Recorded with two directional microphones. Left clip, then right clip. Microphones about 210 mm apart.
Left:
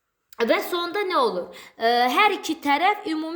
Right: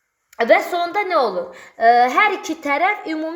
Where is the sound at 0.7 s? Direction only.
50° left (ahead or behind).